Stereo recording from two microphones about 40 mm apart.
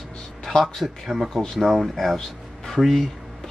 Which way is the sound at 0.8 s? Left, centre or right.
Centre.